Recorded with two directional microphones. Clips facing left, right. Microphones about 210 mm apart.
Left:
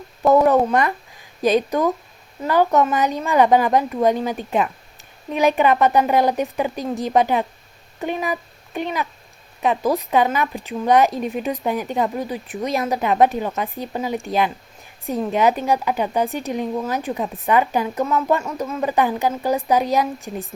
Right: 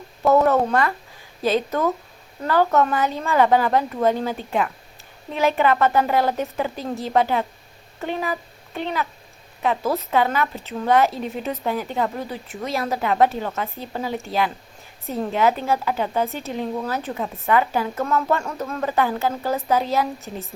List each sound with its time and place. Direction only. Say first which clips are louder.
0.3 s speech: left 2 dB; 15° left (ahead or behind)